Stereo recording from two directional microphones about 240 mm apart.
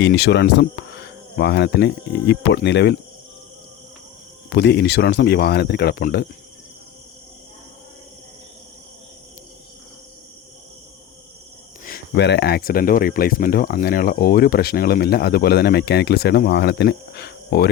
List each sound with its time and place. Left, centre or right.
0.0 s speech: left
4.4 s speech: left
11.9 s speech: left